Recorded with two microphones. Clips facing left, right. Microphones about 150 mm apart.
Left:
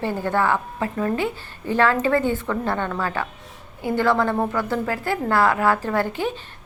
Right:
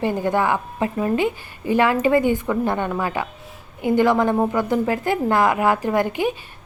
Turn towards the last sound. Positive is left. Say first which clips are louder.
# right 3 dB
turn(degrees=-15)  # may be behind; listen again after turning